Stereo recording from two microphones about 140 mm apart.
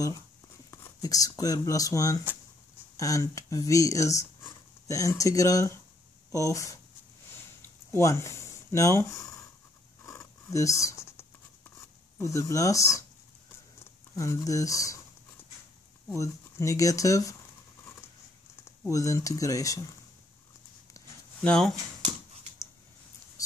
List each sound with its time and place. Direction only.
0.7 s speech: 25° left (ahead or behind)
7.9 s speech: 20° left (ahead or behind)
10.0 s a sound: 20° left (ahead or behind)
12.2 s speech: 20° left (ahead or behind)
14.1 s speech: 20° left (ahead or behind)
16.1 s speech: 20° left (ahead or behind)
18.6 s speech: 25° left (ahead or behind)
21.4 s speech: 5° left (ahead or behind)
22.0 s dog: 50° right (ahead or behind)